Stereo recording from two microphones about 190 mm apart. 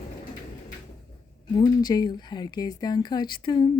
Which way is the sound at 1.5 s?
20° left (ahead or behind).